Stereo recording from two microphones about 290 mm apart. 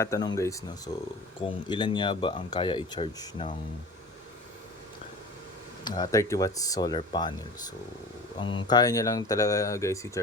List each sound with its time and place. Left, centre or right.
0.0 s speech: centre
5.8 s speech: centre
8.4 s speech: centre